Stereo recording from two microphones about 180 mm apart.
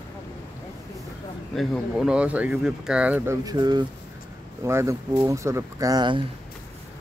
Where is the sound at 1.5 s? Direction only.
Centre (ahead or behind).